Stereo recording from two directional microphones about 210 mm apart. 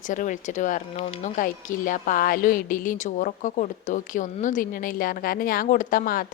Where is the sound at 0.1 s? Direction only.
35° left (ahead or behind).